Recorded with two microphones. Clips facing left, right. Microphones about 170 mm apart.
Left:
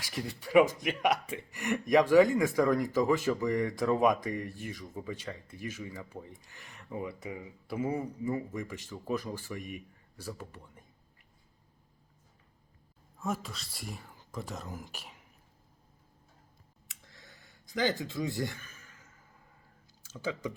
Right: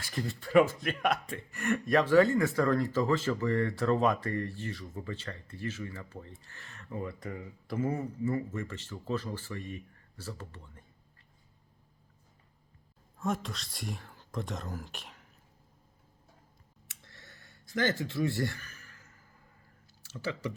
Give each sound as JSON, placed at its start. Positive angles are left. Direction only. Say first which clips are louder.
{"t": 0.0, "sound": "speech", "louder": "right 2 dB", "side_deg": 10}
{"t": 13.1, "sound": "speech", "louder": "right 2 dB", "side_deg": 5}
{"t": 17.0, "sound": "a sound", "louder": "even", "side_deg": 15}